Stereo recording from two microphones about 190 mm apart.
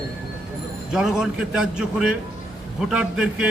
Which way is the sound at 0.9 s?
5° right (ahead or behind).